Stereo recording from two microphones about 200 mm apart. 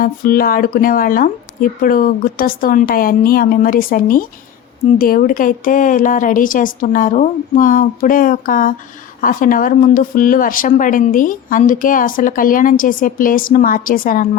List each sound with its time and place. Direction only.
0.0 s speech: 45° left (ahead or behind)